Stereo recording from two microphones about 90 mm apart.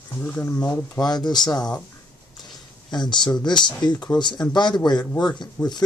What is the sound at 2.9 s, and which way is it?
Speech, 55° left (ahead or behind).